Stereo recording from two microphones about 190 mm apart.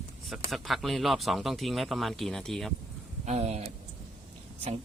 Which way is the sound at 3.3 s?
35° right (ahead or behind).